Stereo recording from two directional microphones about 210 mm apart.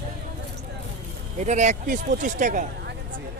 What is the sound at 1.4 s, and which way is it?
Speech, 35° right (ahead or behind).